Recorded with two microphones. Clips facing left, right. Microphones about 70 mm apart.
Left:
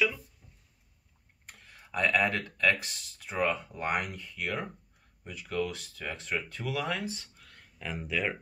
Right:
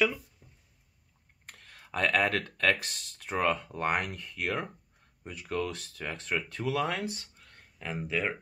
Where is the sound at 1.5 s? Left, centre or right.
Right.